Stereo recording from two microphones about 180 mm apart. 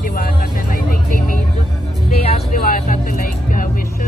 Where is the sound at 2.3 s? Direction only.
50° left (ahead or behind).